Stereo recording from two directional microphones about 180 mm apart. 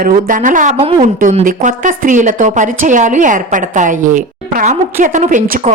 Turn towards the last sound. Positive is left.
turn(degrees=-40)  # may be behind; listen again after turning